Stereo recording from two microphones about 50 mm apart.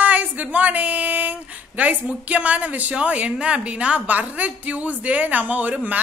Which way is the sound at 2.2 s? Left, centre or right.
Right.